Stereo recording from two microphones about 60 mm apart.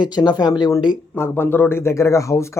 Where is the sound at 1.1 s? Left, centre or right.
Left.